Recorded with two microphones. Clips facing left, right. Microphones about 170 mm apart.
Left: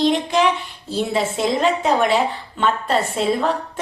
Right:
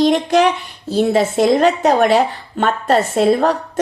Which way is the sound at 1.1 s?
40° right (ahead or behind).